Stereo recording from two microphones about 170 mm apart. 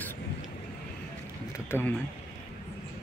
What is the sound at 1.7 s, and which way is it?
Speech, 15° left (ahead or behind).